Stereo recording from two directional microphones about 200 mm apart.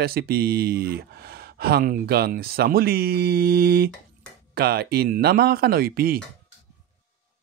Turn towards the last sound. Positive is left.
turn(degrees=-50)  # may be behind; listen again after turning